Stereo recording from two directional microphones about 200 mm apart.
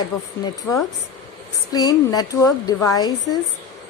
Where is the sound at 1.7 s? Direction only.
20° left (ahead or behind).